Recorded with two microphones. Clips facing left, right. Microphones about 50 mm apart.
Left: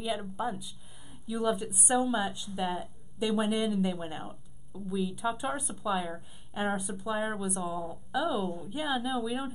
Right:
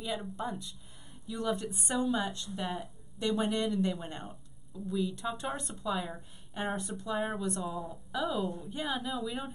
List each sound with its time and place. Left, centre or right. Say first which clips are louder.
0.0 s speech: left 3 dB; centre